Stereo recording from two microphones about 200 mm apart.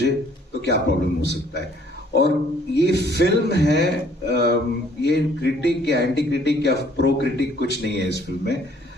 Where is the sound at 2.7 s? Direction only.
60° left (ahead or behind).